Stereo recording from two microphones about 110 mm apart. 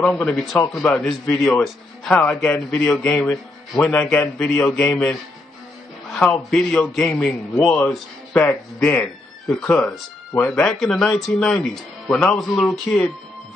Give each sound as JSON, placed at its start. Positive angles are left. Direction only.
{"t": 0.0, "sound": "a man's voice", "side_deg": 5}
{"t": 6.3, "sound": "a man's voice", "side_deg": 10}